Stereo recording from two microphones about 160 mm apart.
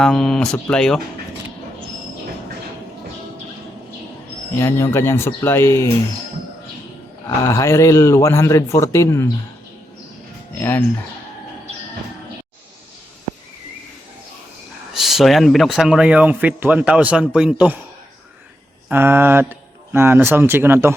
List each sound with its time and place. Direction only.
0.0 s speech: 5° left (ahead or behind)
4.5 s speech: 15° left (ahead or behind)
7.4 s a man's voice: 20° left (ahead or behind)
10.6 s speech: 15° left (ahead or behind)
14.9 s speech: centre (ahead or behind)
18.9 s speech: 15° right (ahead or behind)